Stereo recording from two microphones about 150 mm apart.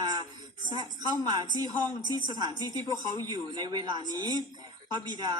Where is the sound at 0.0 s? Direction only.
30° right (ahead or behind).